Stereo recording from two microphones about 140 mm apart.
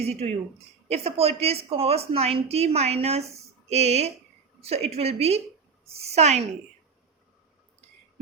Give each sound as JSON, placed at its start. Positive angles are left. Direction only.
{"t": 0.0, "sound": "a woman's voice", "side_deg": -50}